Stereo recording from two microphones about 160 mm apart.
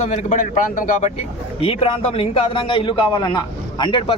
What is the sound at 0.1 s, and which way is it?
Speech, 50° left (ahead or behind).